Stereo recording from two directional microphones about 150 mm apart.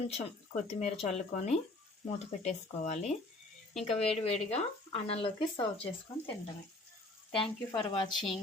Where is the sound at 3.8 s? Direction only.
40° left (ahead or behind).